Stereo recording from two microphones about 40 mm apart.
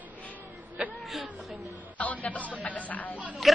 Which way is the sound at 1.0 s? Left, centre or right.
Centre.